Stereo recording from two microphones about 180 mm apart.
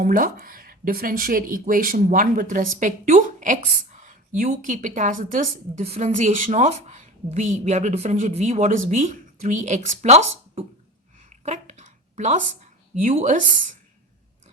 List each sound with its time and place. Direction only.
0.0 s speech: 50° right (ahead or behind); by 10.7 s 35° right (ahead or behind)
11.3 s a sound: 40° right (ahead or behind)
12.9 s speech: 45° right (ahead or behind)